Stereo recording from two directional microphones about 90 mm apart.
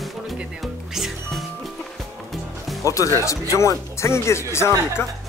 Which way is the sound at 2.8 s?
35° left (ahead or behind).